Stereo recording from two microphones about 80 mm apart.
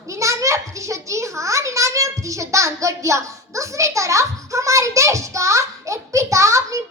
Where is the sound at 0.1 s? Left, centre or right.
Right.